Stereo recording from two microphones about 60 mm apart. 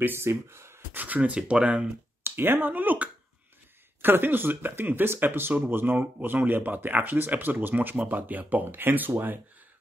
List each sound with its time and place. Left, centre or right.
0.0 s speech: right
0.9 s speech: right
2.2 s speech: right